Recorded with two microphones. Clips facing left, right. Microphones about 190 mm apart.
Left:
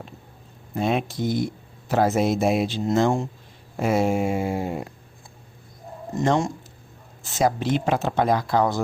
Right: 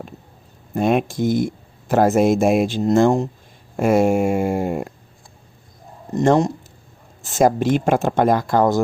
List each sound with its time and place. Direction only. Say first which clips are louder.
0.8 s speech: right 6 dB; 55° right (ahead or behind)
6.1 s speech: right 6 dB; 40° right (ahead or behind)